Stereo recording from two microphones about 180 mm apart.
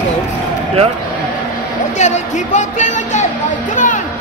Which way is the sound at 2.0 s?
40° left (ahead or behind).